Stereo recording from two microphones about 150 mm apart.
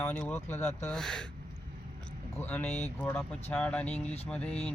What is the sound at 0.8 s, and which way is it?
Speech, 5° left (ahead or behind).